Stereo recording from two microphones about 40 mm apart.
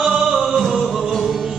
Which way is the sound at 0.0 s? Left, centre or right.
Centre.